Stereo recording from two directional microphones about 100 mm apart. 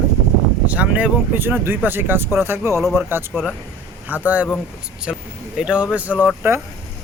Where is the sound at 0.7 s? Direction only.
15° right (ahead or behind).